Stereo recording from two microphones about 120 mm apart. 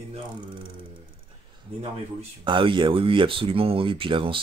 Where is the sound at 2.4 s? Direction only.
45° right (ahead or behind).